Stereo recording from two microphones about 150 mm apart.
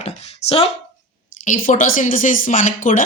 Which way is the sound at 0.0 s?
40° left (ahead or behind).